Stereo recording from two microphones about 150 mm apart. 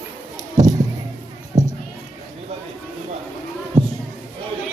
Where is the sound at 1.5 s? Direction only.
25° right (ahead or behind).